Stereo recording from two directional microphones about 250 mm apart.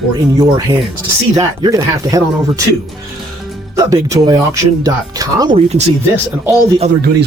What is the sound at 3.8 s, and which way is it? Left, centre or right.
Speech, centre.